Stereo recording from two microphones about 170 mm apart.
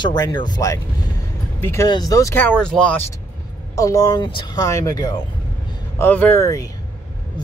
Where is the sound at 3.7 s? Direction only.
20° left (ahead or behind).